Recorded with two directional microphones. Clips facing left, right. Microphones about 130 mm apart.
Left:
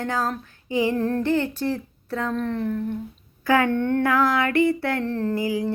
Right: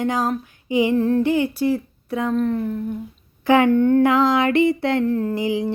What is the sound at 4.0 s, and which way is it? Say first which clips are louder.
Music: right 4 dB; 20° right (ahead or behind).